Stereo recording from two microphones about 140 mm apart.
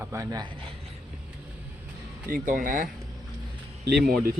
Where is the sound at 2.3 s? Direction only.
75° right (ahead or behind).